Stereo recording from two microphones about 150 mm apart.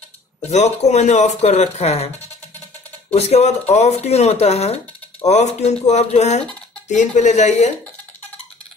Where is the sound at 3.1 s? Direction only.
45° left (ahead or behind).